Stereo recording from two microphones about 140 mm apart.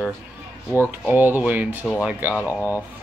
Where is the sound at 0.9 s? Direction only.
15° right (ahead or behind).